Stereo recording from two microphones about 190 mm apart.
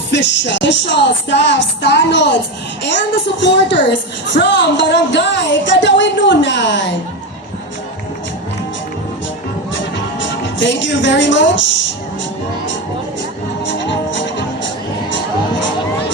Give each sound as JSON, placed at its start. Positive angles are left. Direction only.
{"t": 0.1, "sound": "speech", "side_deg": 65}
{"t": 3.4, "sound": "speech", "side_deg": 70}
{"t": 10.2, "sound": "a woman's voice", "side_deg": 70}
{"t": 13.7, "sound": "music", "side_deg": 70}